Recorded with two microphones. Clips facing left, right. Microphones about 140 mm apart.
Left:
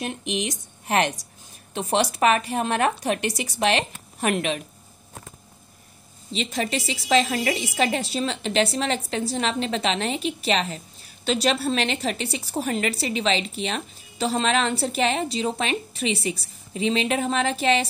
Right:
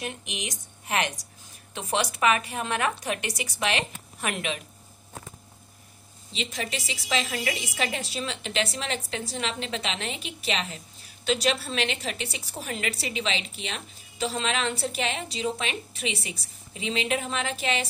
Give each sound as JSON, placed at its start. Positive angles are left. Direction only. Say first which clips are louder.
{"t": 0.3, "sound": "a woman's voice", "louder": "left 9 dB", "side_deg": 35}
{"t": 6.3, "sound": "a woman's voice", "louder": "left 7 dB", "side_deg": 35}